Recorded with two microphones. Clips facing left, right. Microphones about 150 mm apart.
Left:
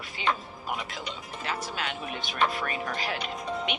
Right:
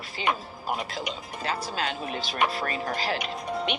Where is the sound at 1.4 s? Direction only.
35° right (ahead or behind).